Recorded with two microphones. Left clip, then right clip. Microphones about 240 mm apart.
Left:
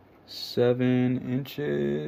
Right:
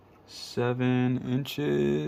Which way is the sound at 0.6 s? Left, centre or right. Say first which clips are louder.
Left 4 dB; centre.